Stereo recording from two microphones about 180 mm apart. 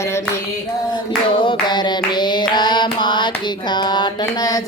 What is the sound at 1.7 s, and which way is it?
Hands, 25° left (ahead or behind).